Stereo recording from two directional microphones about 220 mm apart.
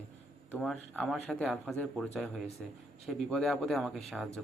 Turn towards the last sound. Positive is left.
turn(degrees=0)  # may be behind; listen again after turning